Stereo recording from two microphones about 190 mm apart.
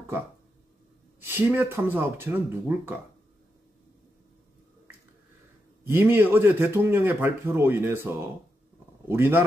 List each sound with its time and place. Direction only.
1.2 s speech: 10° right (ahead or behind)
5.9 s speech: 10° right (ahead or behind)